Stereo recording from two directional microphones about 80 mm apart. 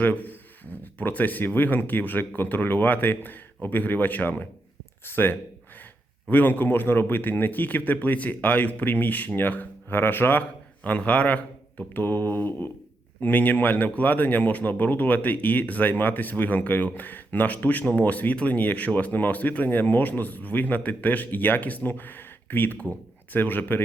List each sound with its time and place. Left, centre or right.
0.0 s a man's voice: left